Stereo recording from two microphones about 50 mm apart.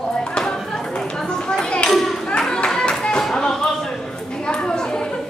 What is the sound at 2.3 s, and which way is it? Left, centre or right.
Clapping, centre.